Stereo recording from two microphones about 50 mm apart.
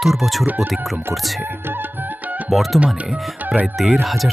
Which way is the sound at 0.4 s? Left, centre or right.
Right.